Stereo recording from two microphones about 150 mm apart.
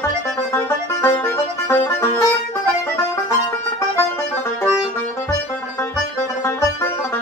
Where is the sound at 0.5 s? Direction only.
20° left (ahead or behind).